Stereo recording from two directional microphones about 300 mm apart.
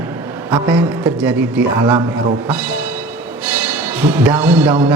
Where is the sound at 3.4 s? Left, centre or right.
Centre.